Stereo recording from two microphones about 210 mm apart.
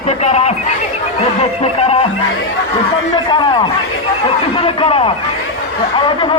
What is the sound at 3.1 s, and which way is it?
Speech, 20° left (ahead or behind).